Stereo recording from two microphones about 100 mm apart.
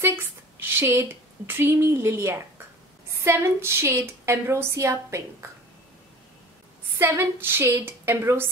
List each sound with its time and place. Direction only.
0.0 s a woman's voice: 20° right (ahead or behind)
7.0 s a woman's voice: 20° right (ahead or behind)